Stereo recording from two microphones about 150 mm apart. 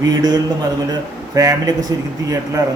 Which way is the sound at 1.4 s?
25° right (ahead or behind).